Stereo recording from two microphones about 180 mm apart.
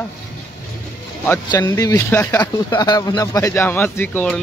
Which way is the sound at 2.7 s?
20° left (ahead or behind).